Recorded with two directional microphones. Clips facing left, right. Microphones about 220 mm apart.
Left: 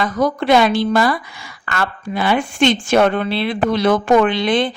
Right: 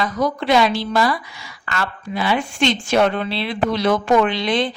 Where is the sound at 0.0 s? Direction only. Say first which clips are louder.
Left 3 dB; 55° left (ahead or behind).